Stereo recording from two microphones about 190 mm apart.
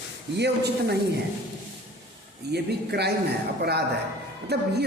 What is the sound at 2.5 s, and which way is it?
Speech, 60° right (ahead or behind).